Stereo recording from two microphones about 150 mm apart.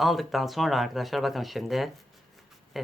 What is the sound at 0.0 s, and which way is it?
Speech, centre (ahead or behind).